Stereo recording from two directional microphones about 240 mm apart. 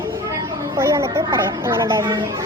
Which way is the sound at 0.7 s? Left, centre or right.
Centre.